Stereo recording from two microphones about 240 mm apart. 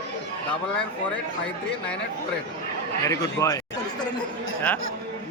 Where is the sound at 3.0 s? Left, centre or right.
Centre.